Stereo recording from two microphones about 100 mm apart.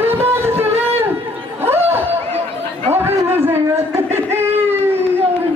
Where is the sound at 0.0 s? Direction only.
20° right (ahead or behind).